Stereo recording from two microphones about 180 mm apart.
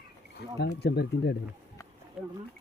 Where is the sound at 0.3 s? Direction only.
65° left (ahead or behind).